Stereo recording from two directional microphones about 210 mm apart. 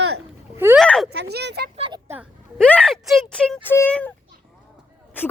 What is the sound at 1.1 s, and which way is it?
Speech, 50° right (ahead or behind).